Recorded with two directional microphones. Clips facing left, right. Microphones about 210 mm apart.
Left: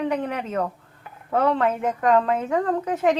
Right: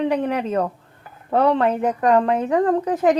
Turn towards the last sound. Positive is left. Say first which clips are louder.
# right 4 dB
turn(degrees=-35)  # may be behind; listen again after turning